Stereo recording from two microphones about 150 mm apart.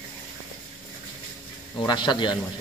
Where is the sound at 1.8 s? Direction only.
30° left (ahead or behind).